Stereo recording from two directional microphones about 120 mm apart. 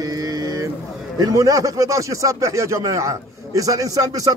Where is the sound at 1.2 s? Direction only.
30° right (ahead or behind).